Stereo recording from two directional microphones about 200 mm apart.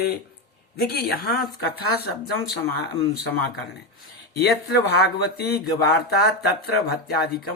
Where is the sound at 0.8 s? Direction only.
50° left (ahead or behind).